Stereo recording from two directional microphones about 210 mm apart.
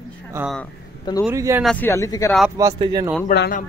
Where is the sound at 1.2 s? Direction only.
15° right (ahead or behind).